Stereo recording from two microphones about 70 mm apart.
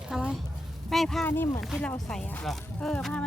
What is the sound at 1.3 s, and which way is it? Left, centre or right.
Speech, left.